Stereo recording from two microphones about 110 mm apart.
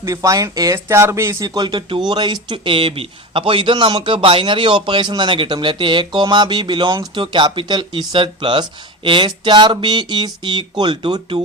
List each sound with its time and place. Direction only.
0.0 s a man's voice: 30° right (ahead or behind)